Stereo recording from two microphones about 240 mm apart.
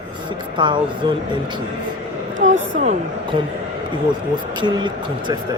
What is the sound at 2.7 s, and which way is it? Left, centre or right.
Speech, right.